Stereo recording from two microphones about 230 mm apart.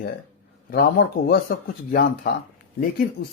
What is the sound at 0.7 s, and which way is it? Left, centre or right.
Speech, left.